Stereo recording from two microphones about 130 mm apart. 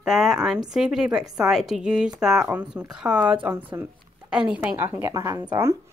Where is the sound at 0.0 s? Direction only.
5° right (ahead or behind).